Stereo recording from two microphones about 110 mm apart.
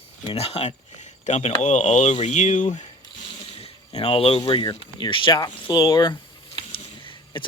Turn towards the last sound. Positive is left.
turn(degrees=50)  # may be behind; listen again after turning